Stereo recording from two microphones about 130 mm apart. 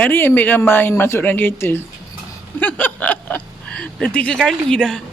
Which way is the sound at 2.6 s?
10° left (ahead or behind).